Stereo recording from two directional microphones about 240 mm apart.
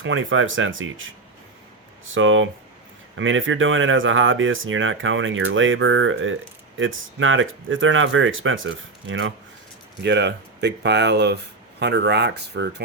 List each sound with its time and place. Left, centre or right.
0.0 s speech: right
2.1 s speech: right